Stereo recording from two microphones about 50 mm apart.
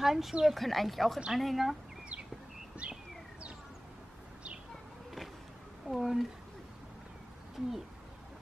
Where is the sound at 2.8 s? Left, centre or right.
Right.